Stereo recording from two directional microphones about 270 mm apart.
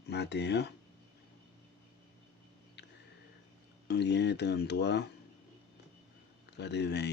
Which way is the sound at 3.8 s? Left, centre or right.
Left.